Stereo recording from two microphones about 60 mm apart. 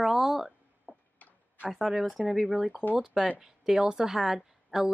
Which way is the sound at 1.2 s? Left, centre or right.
Left.